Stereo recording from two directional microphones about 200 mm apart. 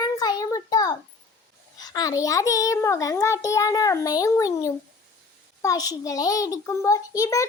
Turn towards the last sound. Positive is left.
turn(degrees=15)  # may be behind; listen again after turning